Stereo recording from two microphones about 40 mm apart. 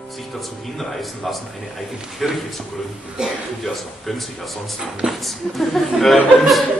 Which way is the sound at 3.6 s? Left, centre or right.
Centre.